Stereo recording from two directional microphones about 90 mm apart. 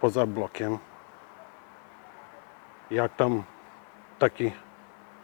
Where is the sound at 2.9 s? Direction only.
20° left (ahead or behind).